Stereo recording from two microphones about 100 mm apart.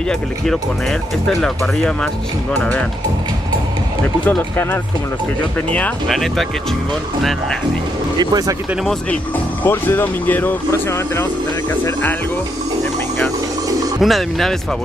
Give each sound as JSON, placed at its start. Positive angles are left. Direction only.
{"t": 1.3, "sound": "speech", "side_deg": 5}
{"t": 2.5, "sound": "speech", "side_deg": 20}
{"t": 6.0, "sound": "speech", "side_deg": 0}
{"t": 8.2, "sound": "speech", "side_deg": -40}
{"t": 9.6, "sound": "speech", "side_deg": 20}
{"t": 14.0, "sound": "speech", "side_deg": 0}